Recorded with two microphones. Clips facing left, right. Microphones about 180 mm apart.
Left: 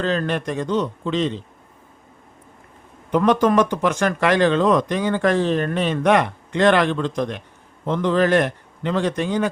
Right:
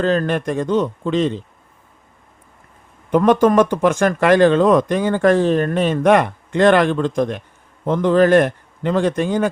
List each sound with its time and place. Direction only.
0.0 s speech: 45° right (ahead or behind)
3.1 s speech: 50° right (ahead or behind)